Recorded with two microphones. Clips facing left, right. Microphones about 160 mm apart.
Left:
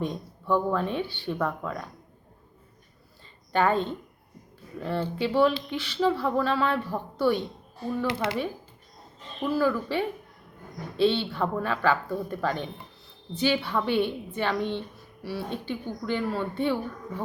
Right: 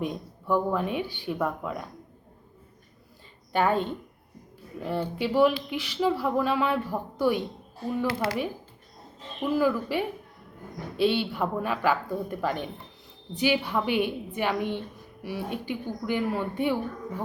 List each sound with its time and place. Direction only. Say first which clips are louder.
0.0 s speech: even; 10° right (ahead or behind)
3.5 s speech: left 1 dB; 10° right (ahead or behind)
8.0 s speech: even; 20° left (ahead or behind)
9.4 s speech: even; 15° right (ahead or behind)